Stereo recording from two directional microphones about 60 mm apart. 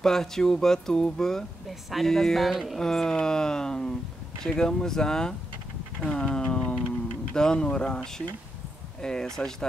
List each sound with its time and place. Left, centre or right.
0.0 s speech: centre
6.5 s a sound: centre
7.3 s speech: centre